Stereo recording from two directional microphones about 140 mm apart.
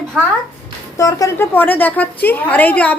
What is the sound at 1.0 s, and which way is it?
Speech, 25° left (ahead or behind).